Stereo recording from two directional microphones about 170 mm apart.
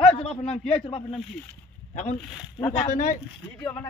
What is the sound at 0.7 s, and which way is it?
Speech, 35° left (ahead or behind).